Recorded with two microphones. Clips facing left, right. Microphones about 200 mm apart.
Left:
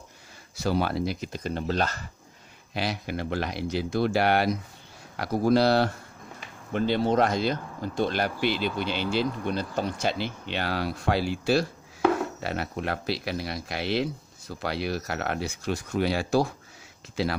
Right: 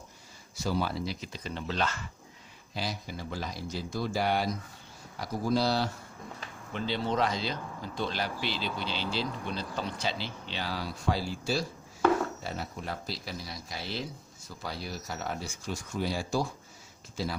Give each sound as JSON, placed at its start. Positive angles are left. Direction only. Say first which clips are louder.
{"t": 0.6, "sound": "speech", "louder": "left 5 dB", "side_deg": 65}
{"t": 2.7, "sound": "speech", "louder": "left 6 dB", "side_deg": 70}
{"t": 6.7, "sound": "speech", "louder": "left 7 dB", "side_deg": 50}